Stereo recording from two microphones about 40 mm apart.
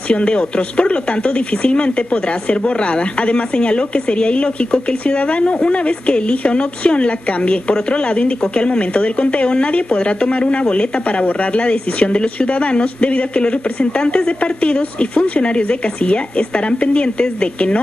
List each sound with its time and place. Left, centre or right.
0.1 s speech: left